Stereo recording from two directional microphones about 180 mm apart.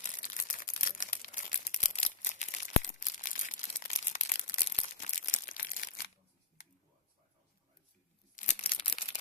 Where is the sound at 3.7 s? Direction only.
40° left (ahead or behind).